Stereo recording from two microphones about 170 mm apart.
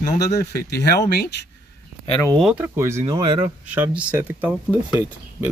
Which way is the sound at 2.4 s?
10° right (ahead or behind).